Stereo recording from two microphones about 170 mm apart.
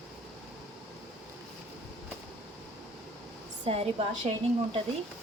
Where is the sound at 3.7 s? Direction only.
35° right (ahead or behind).